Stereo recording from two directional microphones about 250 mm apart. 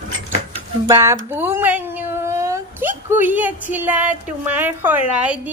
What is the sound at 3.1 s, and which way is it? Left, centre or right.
A woman's voice, centre.